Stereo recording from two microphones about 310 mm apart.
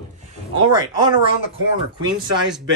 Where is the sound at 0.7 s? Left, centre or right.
Centre.